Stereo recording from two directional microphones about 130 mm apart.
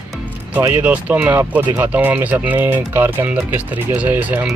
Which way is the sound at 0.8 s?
10° right (ahead or behind).